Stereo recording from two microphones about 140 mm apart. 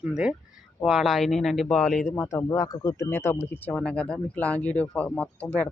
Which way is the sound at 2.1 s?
20° left (ahead or behind).